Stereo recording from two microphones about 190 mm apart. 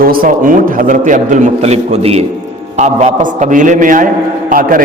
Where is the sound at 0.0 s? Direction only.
50° right (ahead or behind).